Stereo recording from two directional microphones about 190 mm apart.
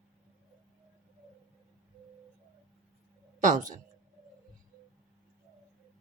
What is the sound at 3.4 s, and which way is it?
Speech, 40° right (ahead or behind).